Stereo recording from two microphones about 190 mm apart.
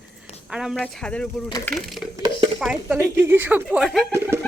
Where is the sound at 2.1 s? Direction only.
25° right (ahead or behind).